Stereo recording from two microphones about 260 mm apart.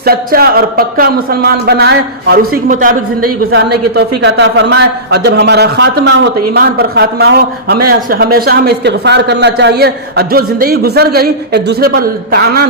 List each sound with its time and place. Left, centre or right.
0.0 s a man's voice: right
3.2 s a woman's voice: right
4.2 s a man's voice: right